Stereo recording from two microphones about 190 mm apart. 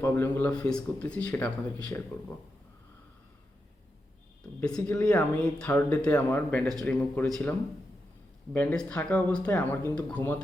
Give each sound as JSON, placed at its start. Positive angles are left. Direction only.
{"t": 0.0, "sound": "speech", "side_deg": 10}
{"t": 4.6, "sound": "speech", "side_deg": 5}
{"t": 8.5, "sound": "speech", "side_deg": 5}